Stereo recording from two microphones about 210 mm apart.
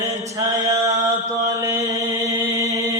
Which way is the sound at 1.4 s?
15° right (ahead or behind).